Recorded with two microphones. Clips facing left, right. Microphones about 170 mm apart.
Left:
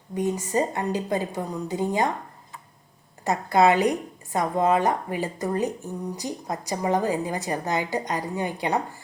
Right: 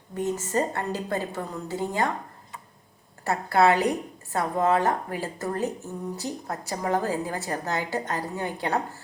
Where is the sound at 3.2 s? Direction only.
15° left (ahead or behind).